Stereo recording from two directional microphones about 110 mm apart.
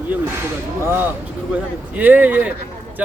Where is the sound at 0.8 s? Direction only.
20° right (ahead or behind).